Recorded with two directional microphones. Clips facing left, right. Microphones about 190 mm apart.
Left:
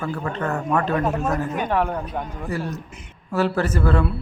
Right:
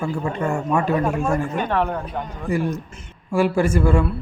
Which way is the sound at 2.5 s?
15° right (ahead or behind).